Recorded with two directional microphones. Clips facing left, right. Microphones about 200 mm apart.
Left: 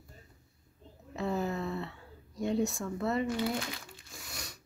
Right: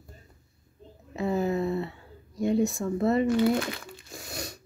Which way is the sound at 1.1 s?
10° right (ahead or behind).